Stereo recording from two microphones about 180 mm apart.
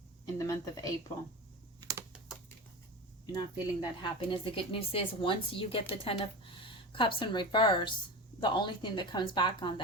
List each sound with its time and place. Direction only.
0.3 s a sound: 15° left (ahead or behind)
1.8 s typing: 20° right (ahead or behind)
3.3 s speech: 25° left (ahead or behind)